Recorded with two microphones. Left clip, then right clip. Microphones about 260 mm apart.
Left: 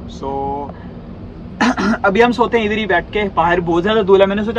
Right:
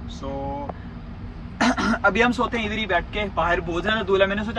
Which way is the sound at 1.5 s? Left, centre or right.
Centre.